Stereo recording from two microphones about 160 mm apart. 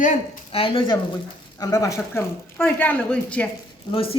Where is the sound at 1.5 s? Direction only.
20° left (ahead or behind).